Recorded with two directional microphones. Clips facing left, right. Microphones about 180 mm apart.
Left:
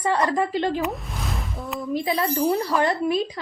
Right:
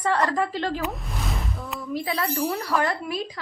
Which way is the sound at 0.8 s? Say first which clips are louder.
Left 2 dB; centre (ahead or behind).